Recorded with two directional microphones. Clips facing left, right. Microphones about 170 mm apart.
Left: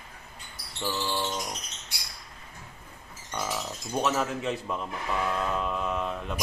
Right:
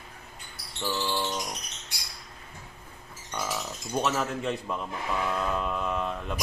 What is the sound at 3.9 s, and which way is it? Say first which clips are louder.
Speech: left 1 dB; centre (ahead or behind).